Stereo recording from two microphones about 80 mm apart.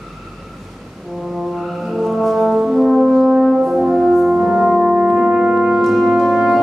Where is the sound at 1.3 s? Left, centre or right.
Centre.